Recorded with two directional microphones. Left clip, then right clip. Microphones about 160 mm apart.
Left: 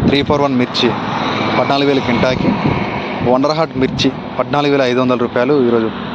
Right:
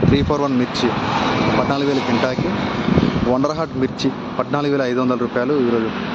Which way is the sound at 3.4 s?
5° left (ahead or behind).